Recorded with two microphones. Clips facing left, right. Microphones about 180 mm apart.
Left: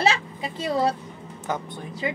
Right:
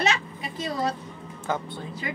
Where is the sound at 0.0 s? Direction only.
30° left (ahead or behind).